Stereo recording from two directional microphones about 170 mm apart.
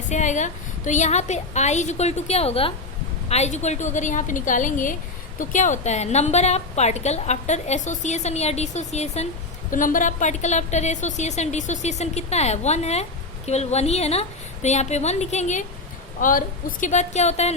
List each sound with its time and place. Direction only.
0.1 s a woman's voice: 45° left (ahead or behind)
16.2 s a woman's voice: 55° left (ahead or behind)